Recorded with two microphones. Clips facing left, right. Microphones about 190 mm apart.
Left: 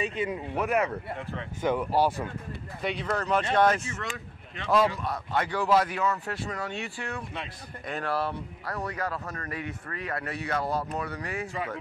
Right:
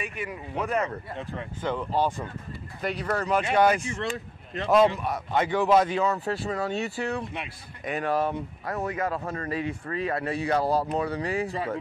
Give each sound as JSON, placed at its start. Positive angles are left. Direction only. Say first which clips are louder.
{"t": 0.0, "sound": "speech", "louder": "left 5 dB", "side_deg": 20}
{"t": 0.6, "sound": "speech", "louder": "even", "side_deg": 5}
{"t": 2.8, "sound": "speech", "louder": "right 2 dB", "side_deg": -5}
{"t": 4.0, "sound": "speech", "louder": "right 6 dB", "side_deg": -35}
{"t": 4.6, "sound": "speech", "louder": "right 4 dB", "side_deg": -20}
{"t": 7.3, "sound": "speech", "louder": "right 1 dB", "side_deg": -15}